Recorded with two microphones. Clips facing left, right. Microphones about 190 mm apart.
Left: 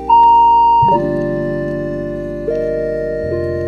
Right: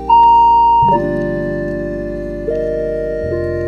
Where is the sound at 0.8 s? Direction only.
Centre (ahead or behind).